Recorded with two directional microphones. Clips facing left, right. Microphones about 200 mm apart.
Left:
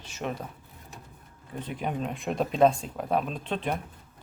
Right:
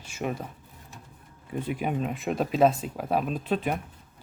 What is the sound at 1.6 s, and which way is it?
Speech, 10° right (ahead or behind).